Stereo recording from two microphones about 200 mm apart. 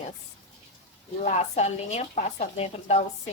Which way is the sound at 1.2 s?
35° left (ahead or behind).